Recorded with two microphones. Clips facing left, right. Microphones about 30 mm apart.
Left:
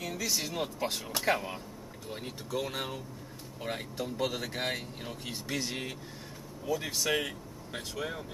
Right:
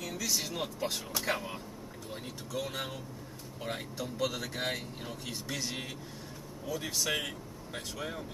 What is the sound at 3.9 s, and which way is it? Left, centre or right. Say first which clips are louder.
Speech: left 1 dB; centre.